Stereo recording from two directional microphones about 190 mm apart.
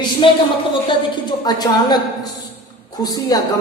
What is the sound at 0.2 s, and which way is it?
Speech, 25° left (ahead or behind).